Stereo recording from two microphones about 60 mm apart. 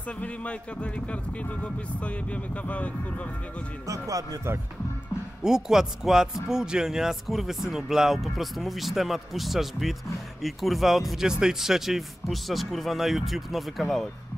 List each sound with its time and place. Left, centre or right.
0.2 s speech: left
3.8 s speech: right
5.4 s speech: centre